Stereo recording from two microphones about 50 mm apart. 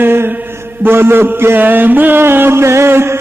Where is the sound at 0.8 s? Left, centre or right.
Right.